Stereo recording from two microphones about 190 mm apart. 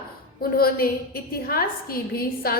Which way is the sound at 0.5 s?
50° left (ahead or behind).